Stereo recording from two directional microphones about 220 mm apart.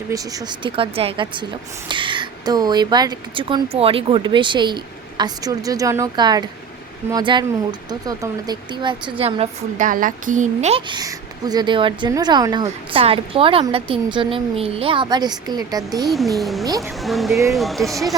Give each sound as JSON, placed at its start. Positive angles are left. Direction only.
{"t": 0.1, "sound": "speech", "side_deg": -15}
{"t": 16.0, "sound": "speech", "side_deg": 0}